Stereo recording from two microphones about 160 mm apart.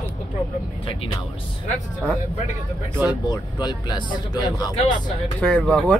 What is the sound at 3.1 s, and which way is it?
Speech, 25° left (ahead or behind).